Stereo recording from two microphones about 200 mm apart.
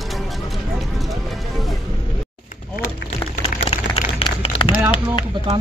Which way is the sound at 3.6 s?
30° left (ahead or behind).